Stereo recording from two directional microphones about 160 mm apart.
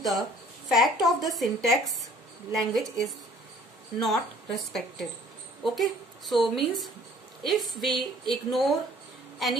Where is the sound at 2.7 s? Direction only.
Centre (ahead or behind).